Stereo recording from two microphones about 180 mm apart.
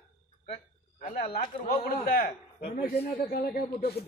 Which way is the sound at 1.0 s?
50° left (ahead or behind).